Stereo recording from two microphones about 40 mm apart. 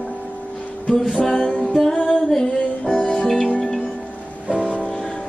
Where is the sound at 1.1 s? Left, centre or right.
Centre.